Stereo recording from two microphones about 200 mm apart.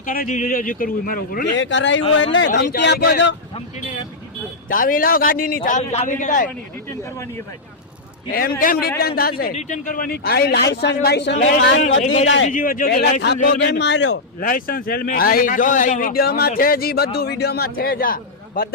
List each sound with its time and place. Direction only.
0.0 s a man's voice: 45° left (ahead or behind)
1.5 s speech: 65° left (ahead or behind)
4.7 s a man's voice: 45° left (ahead or behind)
6.9 s speech: 15° left (ahead or behind)
8.3 s a man's voice: 45° left (ahead or behind)
9.4 s a man's voice: 40° left (ahead or behind)
12.0 s a man's voice: 35° left (ahead or behind)
13.6 s speech: 60° left (ahead or behind)
14.3 s a man's voice: 45° left (ahead or behind)